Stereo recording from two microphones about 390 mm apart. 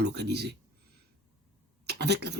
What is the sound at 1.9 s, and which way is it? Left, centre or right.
Speech, right.